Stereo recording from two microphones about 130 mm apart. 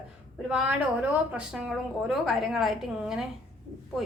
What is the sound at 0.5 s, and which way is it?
A woman's voice, 10° right (ahead or behind).